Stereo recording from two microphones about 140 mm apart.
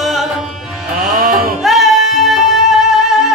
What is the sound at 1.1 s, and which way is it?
Music, 80° right.